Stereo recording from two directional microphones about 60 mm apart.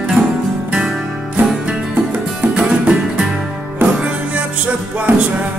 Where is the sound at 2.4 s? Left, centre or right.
Centre.